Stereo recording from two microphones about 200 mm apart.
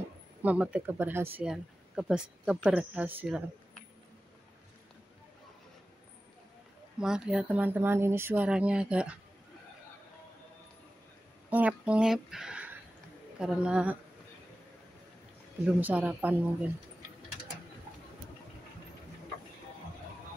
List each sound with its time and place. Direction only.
0.4 s speech: 5° right (ahead or behind)
7.0 s speech: 5° right (ahead or behind)
11.5 s speech: 5° right (ahead or behind)
15.6 s speech: 10° right (ahead or behind)